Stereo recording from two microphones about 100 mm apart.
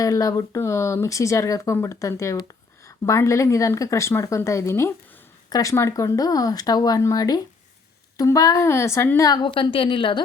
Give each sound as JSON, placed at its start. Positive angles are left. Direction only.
{"t": 0.0, "sound": "a woman's voice", "side_deg": 35}
{"t": 5.5, "sound": "speech", "side_deg": 40}
{"t": 5.7, "sound": "a woman's voice", "side_deg": 30}
{"t": 9.4, "sound": "a woman's voice", "side_deg": 55}